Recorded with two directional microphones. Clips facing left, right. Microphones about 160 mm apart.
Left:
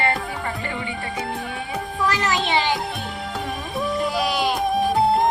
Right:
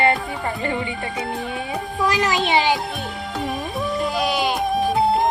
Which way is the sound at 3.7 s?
Centre (ahead or behind).